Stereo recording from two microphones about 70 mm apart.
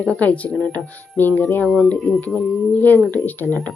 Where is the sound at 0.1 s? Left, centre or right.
Left.